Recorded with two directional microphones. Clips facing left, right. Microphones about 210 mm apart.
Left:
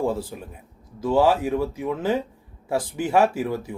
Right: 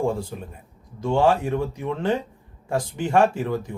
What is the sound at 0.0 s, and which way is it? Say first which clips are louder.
Speech: even; 5° left (ahead or behind).